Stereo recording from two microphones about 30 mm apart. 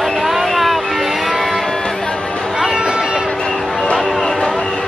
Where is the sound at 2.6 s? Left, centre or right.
Right.